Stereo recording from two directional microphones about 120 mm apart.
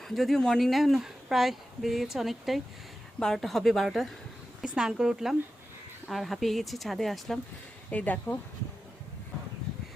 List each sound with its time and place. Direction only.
0.0 s speech: centre (ahead or behind)
7.9 s speech: 10° left (ahead or behind)